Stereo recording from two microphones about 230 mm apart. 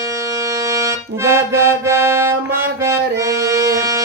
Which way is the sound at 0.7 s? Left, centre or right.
Centre.